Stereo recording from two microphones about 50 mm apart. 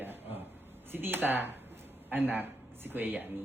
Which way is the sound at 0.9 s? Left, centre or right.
Right.